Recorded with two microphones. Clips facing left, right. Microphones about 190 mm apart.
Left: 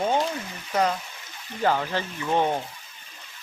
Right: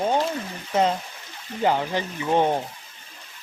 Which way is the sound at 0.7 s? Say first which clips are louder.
Right 2 dB; 25° right (ahead or behind).